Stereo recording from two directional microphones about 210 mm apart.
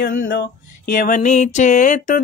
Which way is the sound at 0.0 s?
40° left (ahead or behind).